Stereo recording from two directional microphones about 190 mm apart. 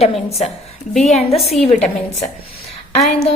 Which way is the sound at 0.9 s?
Centre (ahead or behind).